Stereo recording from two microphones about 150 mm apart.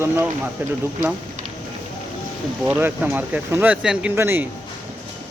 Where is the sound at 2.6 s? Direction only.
10° right (ahead or behind).